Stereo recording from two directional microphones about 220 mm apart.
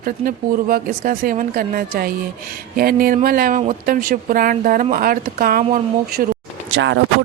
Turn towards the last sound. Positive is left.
turn(degrees=-60)  # may be behind; listen again after turning